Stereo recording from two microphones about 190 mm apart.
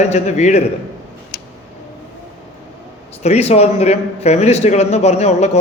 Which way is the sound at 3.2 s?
35° left (ahead or behind).